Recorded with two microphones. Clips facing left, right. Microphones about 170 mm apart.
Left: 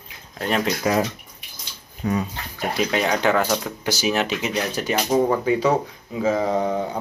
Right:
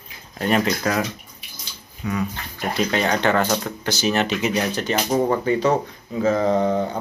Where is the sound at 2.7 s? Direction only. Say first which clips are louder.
Right 1 dB; 5° left (ahead or behind).